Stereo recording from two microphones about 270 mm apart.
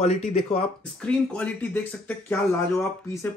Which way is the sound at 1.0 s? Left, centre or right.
Centre.